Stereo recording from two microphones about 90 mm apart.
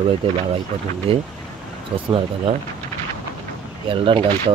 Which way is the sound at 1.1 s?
90° right.